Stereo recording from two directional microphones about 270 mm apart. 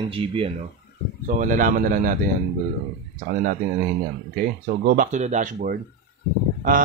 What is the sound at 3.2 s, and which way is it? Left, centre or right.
Speech, right.